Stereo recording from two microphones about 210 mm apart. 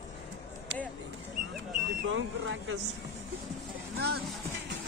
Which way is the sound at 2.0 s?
65° right (ahead or behind).